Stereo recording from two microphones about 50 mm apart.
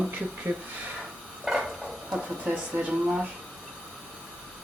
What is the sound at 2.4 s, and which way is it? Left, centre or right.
Speech, right.